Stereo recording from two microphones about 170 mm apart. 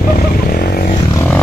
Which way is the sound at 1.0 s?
20° left (ahead or behind).